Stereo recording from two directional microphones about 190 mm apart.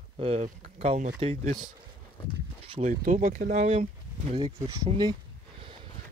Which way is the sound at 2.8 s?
45° right (ahead or behind).